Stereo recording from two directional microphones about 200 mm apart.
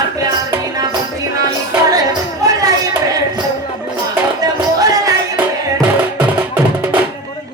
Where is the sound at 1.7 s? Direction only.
15° right (ahead or behind).